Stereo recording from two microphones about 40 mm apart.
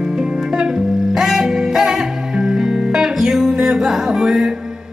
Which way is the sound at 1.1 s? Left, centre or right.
Centre.